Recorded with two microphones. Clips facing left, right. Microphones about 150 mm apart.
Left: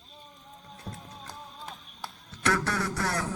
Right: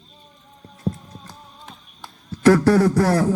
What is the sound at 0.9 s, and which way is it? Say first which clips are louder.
Music: right 16 dB; 45° right (ahead or behind).